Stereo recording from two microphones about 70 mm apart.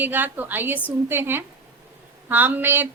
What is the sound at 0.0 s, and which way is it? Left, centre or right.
Speech, right.